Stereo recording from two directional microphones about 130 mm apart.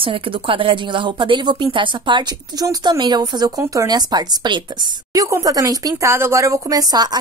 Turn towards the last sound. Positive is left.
turn(degrees=-30)  # may be behind; listen again after turning